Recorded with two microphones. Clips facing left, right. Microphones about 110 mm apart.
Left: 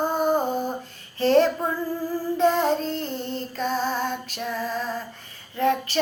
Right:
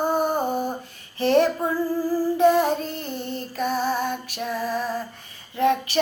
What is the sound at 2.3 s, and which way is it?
Female singing, 15° right (ahead or behind).